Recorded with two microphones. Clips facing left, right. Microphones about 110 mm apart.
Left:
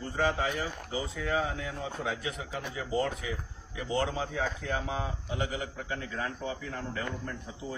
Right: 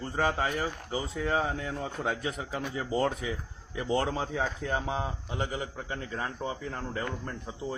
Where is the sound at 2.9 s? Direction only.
30° right (ahead or behind).